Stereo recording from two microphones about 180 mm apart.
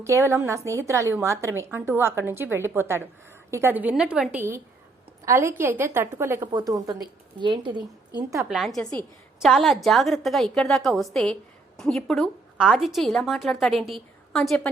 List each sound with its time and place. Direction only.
0.0 s a woman's voice: 15° right (ahead or behind)
8.4 s a woman's voice: centre (ahead or behind)